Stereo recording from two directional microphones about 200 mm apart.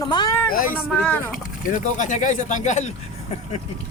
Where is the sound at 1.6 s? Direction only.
40° left (ahead or behind).